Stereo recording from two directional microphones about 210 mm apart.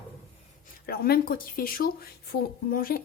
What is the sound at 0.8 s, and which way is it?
Speech, 45° left (ahead or behind).